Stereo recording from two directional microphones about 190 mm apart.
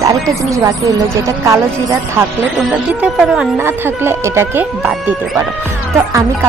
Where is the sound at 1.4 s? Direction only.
15° right (ahead or behind).